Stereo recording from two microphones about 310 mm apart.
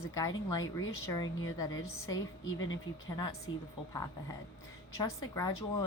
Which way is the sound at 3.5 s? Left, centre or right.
Centre.